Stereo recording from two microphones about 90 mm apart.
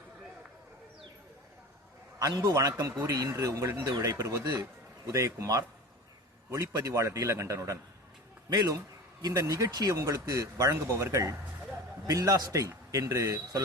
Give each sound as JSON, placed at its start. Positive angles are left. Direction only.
{"t": 2.1, "sound": "speech", "side_deg": -40}